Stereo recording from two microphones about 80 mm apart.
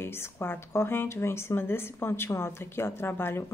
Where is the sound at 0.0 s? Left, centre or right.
Left.